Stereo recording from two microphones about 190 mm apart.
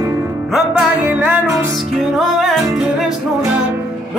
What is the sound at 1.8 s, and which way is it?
Music, centre (ahead or behind).